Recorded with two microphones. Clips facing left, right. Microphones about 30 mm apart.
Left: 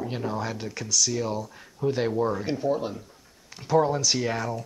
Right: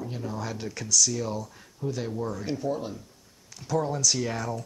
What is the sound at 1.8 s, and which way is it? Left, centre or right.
Speech, left.